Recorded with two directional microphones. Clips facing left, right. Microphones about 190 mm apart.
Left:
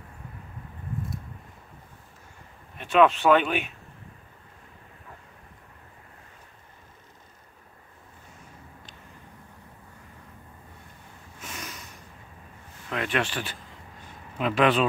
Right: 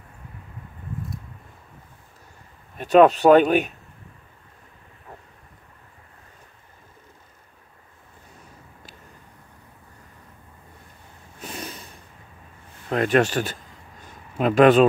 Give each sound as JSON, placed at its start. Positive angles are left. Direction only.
{"t": 2.8, "sound": "speech", "side_deg": -40}
{"t": 11.3, "sound": "snort", "side_deg": -35}
{"t": 12.9, "sound": "speech", "side_deg": -40}